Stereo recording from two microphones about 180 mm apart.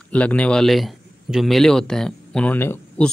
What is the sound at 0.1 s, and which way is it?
A man's voice, 5° left (ahead or behind).